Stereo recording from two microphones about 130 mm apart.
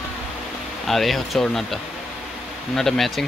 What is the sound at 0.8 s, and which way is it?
Speech, centre (ahead or behind).